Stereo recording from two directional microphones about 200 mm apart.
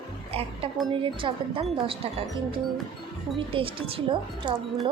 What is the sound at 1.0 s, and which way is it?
A woman's voice, 25° right (ahead or behind).